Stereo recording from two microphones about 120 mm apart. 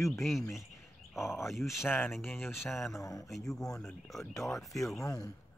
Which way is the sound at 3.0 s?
30° left (ahead or behind).